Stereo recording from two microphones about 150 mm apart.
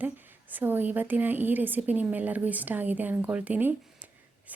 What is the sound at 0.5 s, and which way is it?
Speech, 15° right (ahead or behind).